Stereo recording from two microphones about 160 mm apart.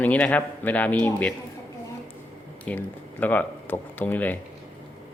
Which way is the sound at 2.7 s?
10° left (ahead or behind).